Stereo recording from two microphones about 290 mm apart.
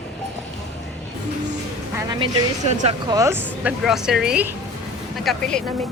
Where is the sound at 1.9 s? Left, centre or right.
Centre.